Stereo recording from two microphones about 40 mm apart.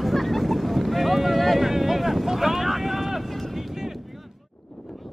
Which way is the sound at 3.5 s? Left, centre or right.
Centre.